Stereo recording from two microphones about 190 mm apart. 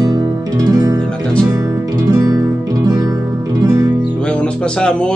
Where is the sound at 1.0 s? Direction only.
5° left (ahead or behind).